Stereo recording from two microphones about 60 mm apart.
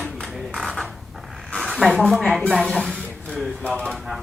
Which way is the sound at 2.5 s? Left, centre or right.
Centre.